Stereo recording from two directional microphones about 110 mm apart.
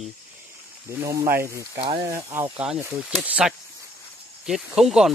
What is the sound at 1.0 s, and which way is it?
Speech, 30° right (ahead or behind).